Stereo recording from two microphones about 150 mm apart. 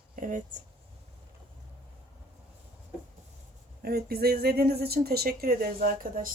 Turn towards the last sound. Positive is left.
turn(degrees=-65)  # may be behind; listen again after turning